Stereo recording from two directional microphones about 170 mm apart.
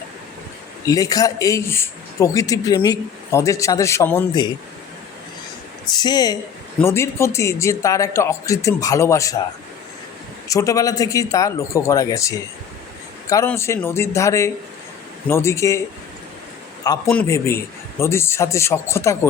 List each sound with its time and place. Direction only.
0.9 s speech: 20° left (ahead or behind)
4.3 s speech: 25° left (ahead or behind)
5.9 s speech: 25° left (ahead or behind)
10.5 s speech: 20° left (ahead or behind)
17.1 s speech: 10° left (ahead or behind)